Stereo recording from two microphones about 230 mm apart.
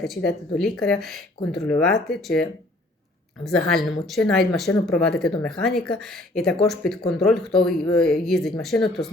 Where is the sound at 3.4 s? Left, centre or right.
Centre.